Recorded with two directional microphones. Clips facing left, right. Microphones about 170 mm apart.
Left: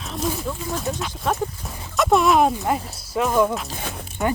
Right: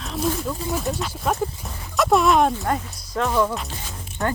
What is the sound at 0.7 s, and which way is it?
Speech, centre (ahead or behind).